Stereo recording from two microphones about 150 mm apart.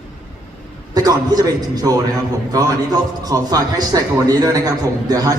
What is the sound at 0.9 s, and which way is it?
A man's voice, 25° right (ahead or behind).